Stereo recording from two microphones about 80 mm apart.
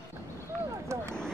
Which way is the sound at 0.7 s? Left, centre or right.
Right.